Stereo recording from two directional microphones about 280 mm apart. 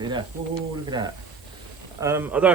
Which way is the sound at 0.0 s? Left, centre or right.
Centre.